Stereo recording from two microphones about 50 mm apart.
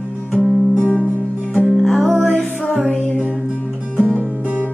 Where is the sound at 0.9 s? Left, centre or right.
Right.